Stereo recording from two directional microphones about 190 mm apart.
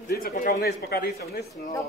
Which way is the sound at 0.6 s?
55° left (ahead or behind).